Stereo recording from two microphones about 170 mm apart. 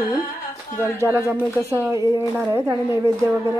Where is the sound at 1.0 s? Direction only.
10° right (ahead or behind).